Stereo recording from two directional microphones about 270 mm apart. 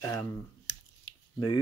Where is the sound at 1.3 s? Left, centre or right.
Left.